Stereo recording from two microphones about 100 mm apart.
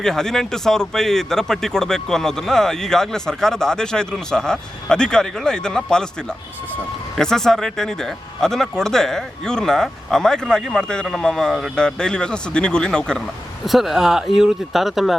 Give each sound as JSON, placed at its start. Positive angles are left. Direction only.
{"t": 0.0, "sound": "speech", "side_deg": 5}
{"t": 13.7, "sound": "speech", "side_deg": -5}